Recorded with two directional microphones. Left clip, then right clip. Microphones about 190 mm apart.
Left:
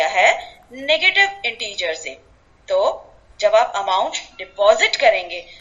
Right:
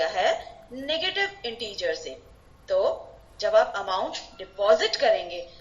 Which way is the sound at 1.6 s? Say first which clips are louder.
Left 5 dB; 65° left (ahead or behind).